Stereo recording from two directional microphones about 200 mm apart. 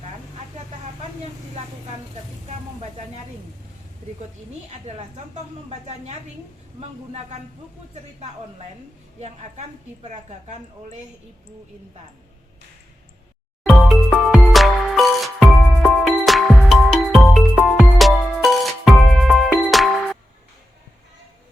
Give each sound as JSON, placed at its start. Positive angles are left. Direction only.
{"t": 4.9, "sound": "a woman's voice", "side_deg": -35}
{"t": 6.7, "sound": "a woman's voice", "side_deg": -35}
{"t": 9.2, "sound": "a woman's voice", "side_deg": -35}
{"t": 13.7, "sound": "music", "side_deg": 0}